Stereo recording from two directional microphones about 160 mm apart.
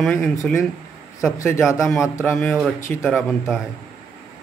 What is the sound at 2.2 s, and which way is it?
Speech, 15° left (ahead or behind).